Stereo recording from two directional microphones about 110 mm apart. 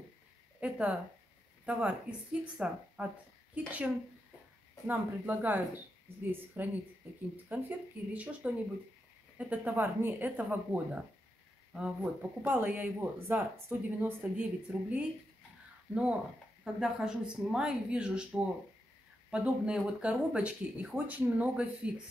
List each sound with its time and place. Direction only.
0.6 s speech: 10° right (ahead or behind)